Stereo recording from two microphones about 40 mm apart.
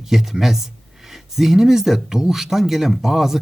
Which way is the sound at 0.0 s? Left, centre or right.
Centre.